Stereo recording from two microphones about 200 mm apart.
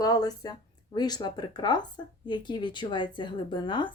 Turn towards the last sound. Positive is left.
turn(degrees=25)  # may be behind; listen again after turning